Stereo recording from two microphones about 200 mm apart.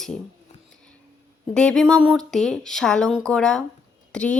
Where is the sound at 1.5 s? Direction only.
5° left (ahead or behind).